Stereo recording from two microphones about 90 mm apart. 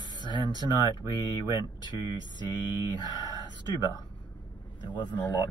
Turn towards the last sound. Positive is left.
turn(degrees=55)  # may be behind; listen again after turning